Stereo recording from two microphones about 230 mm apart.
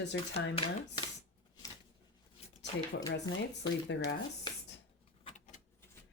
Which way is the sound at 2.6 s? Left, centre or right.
Left.